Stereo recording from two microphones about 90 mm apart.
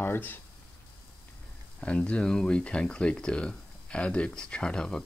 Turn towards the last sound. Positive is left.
turn(degrees=5)  # may be behind; listen again after turning